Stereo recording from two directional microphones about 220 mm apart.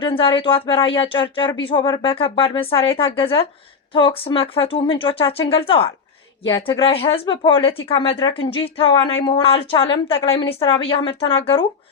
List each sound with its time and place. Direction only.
0.0 s speech: 25° left (ahead or behind)